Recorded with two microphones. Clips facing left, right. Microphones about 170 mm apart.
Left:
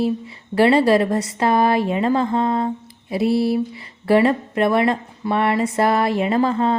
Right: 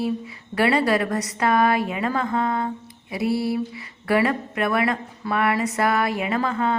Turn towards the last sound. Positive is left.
turn(degrees=30)  # may be behind; listen again after turning